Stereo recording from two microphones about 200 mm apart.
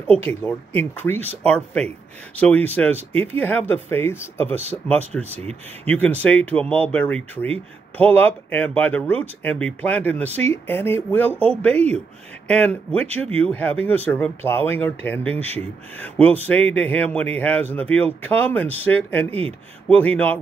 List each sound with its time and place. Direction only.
0.1 s speech: 10° left (ahead or behind)
5.3 s speech: 30° right (ahead or behind)
5.9 s speech: 5° left (ahead or behind)
12.4 s speech: 5° left (ahead or behind)